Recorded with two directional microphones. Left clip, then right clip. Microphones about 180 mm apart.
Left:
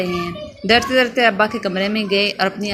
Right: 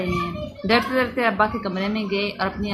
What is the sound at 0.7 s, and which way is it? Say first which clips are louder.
Speech: left 6 dB; 20° left (ahead or behind).